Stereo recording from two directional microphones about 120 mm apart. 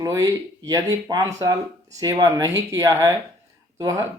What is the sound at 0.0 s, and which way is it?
Speech, 30° right (ahead or behind).